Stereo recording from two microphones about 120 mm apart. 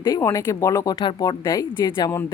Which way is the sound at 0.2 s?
25° left (ahead or behind).